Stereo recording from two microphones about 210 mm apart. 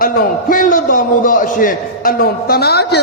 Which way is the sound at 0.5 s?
40° left (ahead or behind).